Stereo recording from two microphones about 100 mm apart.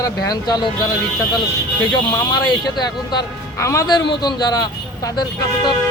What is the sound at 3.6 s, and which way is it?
Speech, 30° left (ahead or behind).